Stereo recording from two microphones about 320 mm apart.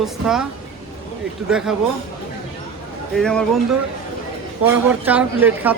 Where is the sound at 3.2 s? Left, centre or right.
Centre.